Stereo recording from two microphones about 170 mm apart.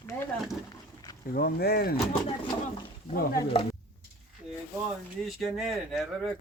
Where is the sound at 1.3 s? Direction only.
65° left (ahead or behind).